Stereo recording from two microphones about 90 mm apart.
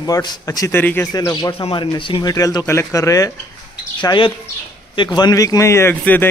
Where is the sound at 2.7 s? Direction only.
30° left (ahead or behind).